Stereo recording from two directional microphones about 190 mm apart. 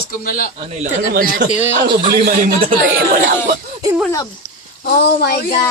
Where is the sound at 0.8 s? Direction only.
50° right (ahead or behind).